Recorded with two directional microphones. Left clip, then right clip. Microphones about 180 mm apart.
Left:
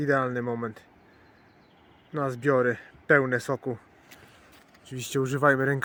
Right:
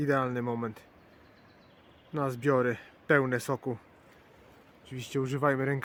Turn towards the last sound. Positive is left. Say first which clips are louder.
# left 6 dB
turn(degrees=15)  # may be behind; listen again after turning